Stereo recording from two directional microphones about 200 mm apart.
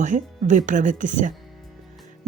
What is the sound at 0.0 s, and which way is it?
Speech, 40° right (ahead or behind).